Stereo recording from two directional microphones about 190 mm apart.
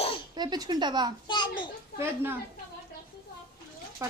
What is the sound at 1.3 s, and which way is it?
Speech, 25° left (ahead or behind).